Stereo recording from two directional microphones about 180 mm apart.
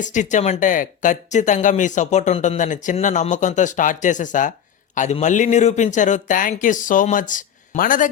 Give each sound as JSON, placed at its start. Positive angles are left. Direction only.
{"t": 0.0, "sound": "speech", "side_deg": 45}